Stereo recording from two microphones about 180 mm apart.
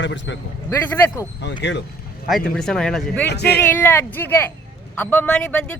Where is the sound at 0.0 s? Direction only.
90° left.